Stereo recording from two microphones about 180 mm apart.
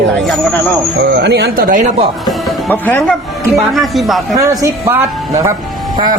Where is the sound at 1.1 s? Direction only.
65° right (ahead or behind).